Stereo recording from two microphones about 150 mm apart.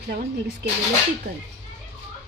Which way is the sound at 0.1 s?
90° right.